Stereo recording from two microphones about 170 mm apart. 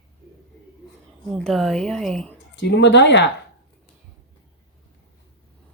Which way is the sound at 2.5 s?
90° left.